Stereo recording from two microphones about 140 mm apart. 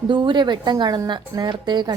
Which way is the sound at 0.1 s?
35° right (ahead or behind).